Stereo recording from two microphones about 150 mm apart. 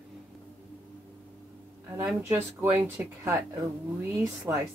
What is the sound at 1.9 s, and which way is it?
Speech, 15° right (ahead or behind).